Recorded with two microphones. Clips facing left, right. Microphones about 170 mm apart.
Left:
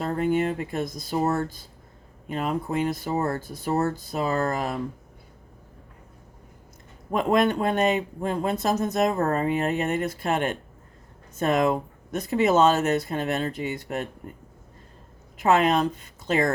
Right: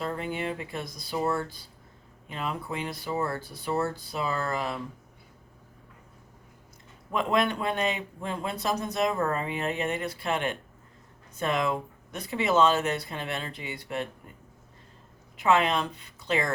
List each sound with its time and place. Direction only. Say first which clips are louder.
0.0 s speech: left 8 dB; 45° left (ahead or behind)
7.1 s speech: left 5 dB; 45° left (ahead or behind)
15.4 s speech: left 4 dB; 45° left (ahead or behind)